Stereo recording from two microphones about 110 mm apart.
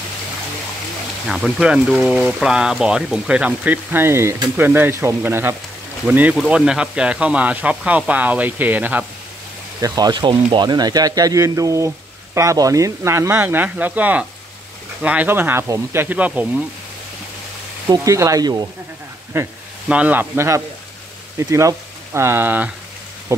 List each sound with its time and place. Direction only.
1.3 s speech: 5° right (ahead or behind)
9.8 s speech: 35° right (ahead or behind); by 16.6 s 15° right (ahead or behind)
17.8 s speech: 30° right (ahead or behind)
19.3 s speech: 25° right (ahead or behind)